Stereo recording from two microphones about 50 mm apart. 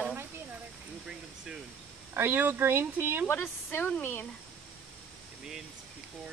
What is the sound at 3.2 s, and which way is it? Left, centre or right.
A woman's voice, left.